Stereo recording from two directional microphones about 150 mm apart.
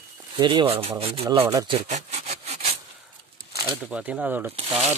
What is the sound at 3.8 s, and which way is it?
Speech, 10° right (ahead or behind).